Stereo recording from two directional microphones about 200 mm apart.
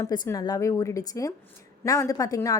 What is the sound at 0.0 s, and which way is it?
A woman's voice, 15° left (ahead or behind).